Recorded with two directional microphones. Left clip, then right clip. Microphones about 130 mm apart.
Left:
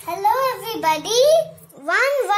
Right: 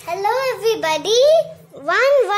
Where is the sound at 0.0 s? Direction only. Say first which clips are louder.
Even; 60° right (ahead or behind).